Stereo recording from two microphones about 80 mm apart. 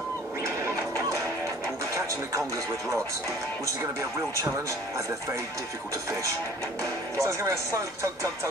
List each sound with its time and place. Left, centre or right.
7.2 s speech: right